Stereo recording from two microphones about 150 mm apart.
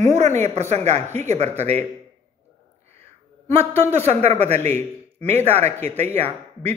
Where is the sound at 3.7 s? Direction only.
45° right (ahead or behind).